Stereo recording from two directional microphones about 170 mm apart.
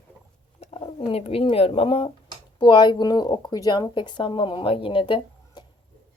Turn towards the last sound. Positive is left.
turn(degrees=25)  # may be behind; listen again after turning